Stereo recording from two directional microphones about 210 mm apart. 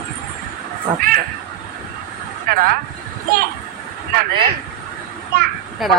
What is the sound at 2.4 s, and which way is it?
Speech, 45° right (ahead or behind).